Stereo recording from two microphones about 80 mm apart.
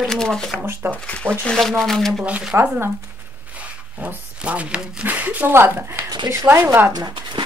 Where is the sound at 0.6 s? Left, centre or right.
Right.